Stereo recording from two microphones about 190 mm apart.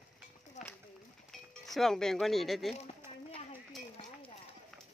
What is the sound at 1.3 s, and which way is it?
Speech, centre (ahead or behind).